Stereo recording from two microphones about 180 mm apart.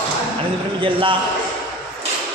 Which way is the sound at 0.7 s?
30° right (ahead or behind).